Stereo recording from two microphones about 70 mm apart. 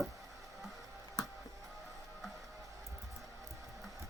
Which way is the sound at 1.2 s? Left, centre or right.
Left.